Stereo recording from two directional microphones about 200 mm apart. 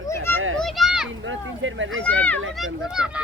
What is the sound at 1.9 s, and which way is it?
Speech, 5° left (ahead or behind).